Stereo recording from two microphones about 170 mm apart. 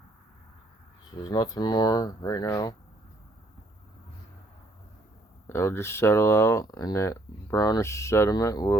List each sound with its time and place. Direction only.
1.1 s speech: 25° left (ahead or behind)
5.5 s speech: 15° left (ahead or behind)